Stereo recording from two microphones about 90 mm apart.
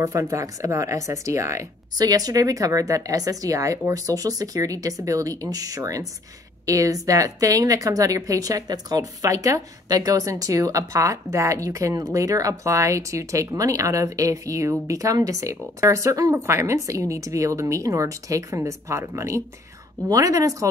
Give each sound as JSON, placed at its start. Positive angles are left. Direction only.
{"t": 0.0, "sound": "a woman's voice", "side_deg": -35}